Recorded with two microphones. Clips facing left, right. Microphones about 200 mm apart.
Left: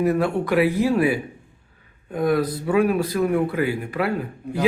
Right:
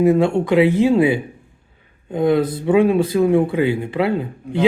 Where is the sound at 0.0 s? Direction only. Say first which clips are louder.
Right 6 dB; 25° right (ahead or behind).